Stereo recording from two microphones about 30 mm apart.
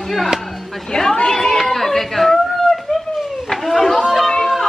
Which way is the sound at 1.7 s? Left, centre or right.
Centre.